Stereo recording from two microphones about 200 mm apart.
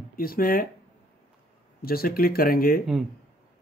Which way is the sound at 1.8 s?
50° left (ahead or behind).